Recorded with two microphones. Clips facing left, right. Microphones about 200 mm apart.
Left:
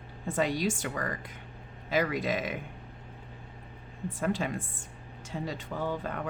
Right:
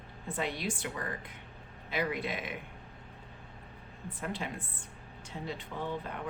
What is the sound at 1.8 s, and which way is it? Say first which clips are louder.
Speech: left 5 dB; 90° left.